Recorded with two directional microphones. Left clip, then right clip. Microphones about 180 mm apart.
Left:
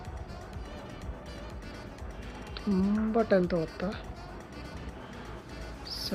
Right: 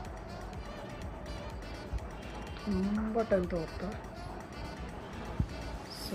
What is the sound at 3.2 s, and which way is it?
Speech, 45° left (ahead or behind).